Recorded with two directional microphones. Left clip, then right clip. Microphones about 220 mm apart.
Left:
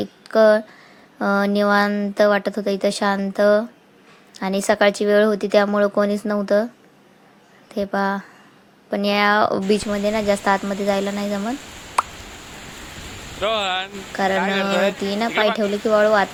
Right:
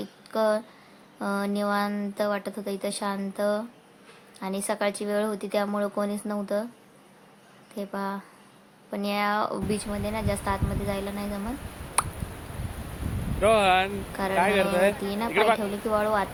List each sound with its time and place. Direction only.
0.0 s speech: 25° left (ahead or behind)
7.7 s speech: 25° left (ahead or behind)
12.0 s a sound: centre (ahead or behind)
13.4 s speech: centre (ahead or behind)
15.0 s speech: 20° left (ahead or behind)
15.3 s speech: 5° left (ahead or behind)
15.9 s speech: 20° left (ahead or behind)